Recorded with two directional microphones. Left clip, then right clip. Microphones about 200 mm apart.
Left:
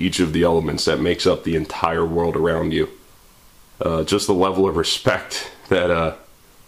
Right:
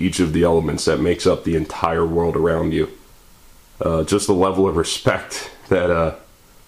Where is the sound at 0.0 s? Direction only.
10° left (ahead or behind).